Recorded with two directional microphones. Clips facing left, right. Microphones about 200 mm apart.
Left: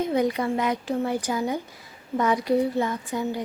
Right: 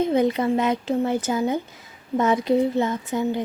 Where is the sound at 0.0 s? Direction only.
25° right (ahead or behind).